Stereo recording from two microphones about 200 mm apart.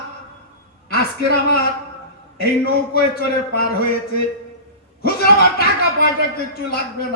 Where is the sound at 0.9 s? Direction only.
50° left (ahead or behind).